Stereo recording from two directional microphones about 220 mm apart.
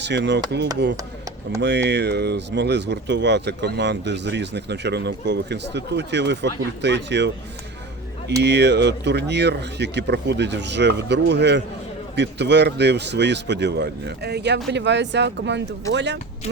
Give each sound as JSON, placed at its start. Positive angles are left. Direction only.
{"t": 0.0, "sound": "speech", "side_deg": -50}
{"t": 1.6, "sound": "speech", "side_deg": -50}
{"t": 8.4, "sound": "speech", "side_deg": -50}